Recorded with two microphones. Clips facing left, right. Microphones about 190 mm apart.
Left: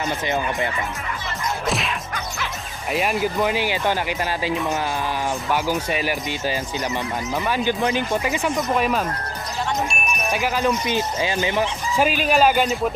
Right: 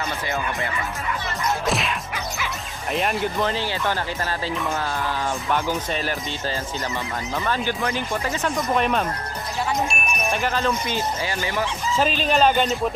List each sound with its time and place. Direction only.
1.7 s whip: centre (ahead or behind)
2.9 s speech: 5° left (ahead or behind)